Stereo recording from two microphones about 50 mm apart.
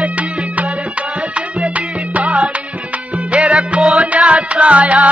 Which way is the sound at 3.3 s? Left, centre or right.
Right.